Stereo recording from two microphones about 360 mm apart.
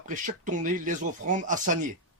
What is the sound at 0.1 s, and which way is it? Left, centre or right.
A man's voice, right.